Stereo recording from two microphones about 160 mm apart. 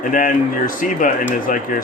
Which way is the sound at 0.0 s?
60° left (ahead or behind).